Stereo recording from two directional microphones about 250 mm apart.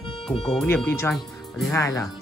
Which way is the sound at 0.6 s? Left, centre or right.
Centre.